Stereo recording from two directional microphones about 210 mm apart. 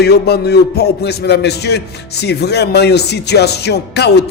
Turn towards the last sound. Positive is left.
turn(degrees=50)  # may be behind; listen again after turning